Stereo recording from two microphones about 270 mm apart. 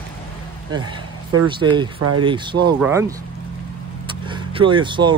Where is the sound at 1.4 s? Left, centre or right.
Centre.